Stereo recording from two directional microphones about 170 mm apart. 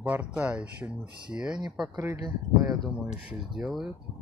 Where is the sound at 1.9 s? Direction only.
20° right (ahead or behind).